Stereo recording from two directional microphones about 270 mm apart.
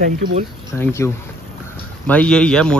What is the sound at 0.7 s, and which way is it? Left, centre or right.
Speech, centre.